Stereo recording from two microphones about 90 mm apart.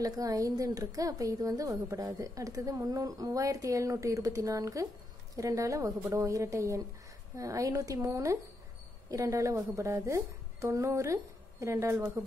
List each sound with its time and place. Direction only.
0.0 s a woman's voice: 40° right (ahead or behind)